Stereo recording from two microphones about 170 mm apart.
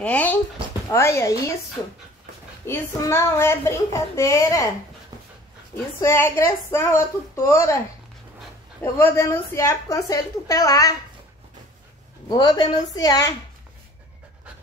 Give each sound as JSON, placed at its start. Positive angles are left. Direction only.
{"t": 0.0, "sound": "a woman's voice", "side_deg": 10}
{"t": 5.9, "sound": "a woman's voice", "side_deg": 15}
{"t": 8.9, "sound": "a woman's voice", "side_deg": 15}
{"t": 12.3, "sound": "a woman's voice", "side_deg": 25}